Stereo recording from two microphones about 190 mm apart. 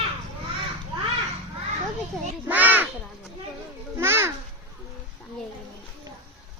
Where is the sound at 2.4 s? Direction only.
10° right (ahead or behind).